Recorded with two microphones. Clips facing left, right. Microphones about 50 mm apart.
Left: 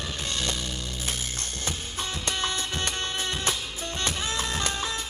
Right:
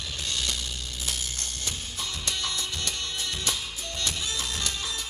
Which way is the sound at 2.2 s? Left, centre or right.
Left.